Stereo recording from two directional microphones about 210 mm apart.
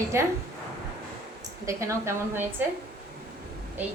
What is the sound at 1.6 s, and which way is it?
Speech, 15° right (ahead or behind).